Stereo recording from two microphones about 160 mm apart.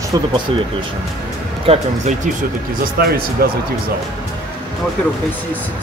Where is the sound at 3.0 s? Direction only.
70° right (ahead or behind).